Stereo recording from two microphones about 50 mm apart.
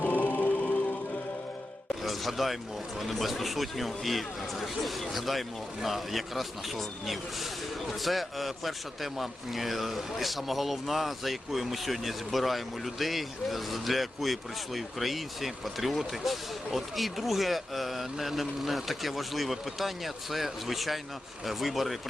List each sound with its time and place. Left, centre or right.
0.0 s music: left
2.0 s a sound: centre
3.0 s a man's voice: centre